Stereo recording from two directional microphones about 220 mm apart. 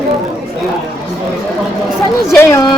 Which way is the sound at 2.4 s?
15° left (ahead or behind).